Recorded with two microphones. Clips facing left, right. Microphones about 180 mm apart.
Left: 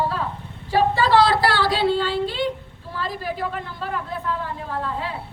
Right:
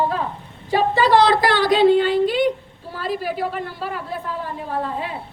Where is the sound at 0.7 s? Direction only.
15° right (ahead or behind).